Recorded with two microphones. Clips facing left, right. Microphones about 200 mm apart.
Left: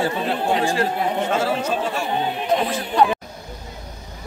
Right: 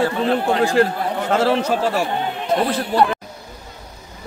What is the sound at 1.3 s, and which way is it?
Speech, 70° right (ahead or behind).